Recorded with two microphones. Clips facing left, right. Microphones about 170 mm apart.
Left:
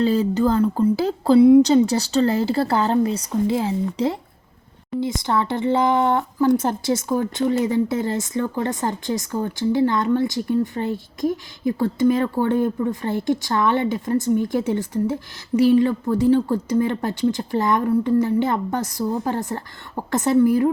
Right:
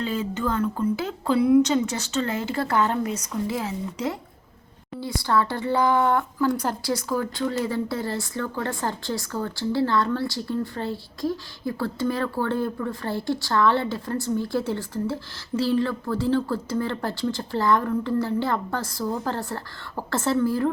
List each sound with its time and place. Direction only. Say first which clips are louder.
0.0 s speech: left 8 dB; 35° left (ahead or behind); by 20.7 s 15° left (ahead or behind)